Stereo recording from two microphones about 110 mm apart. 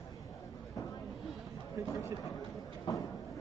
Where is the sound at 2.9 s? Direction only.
40° left (ahead or behind).